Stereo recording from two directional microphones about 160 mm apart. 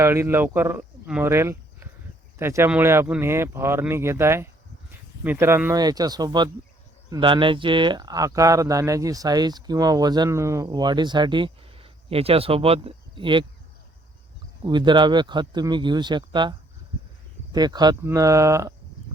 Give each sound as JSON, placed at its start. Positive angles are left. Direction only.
{"t": 0.0, "sound": "speech", "side_deg": -15}
{"t": 4.9, "sound": "a sound", "side_deg": -10}
{"t": 5.8, "sound": "speech", "side_deg": -25}
{"t": 14.6, "sound": "speech", "side_deg": -30}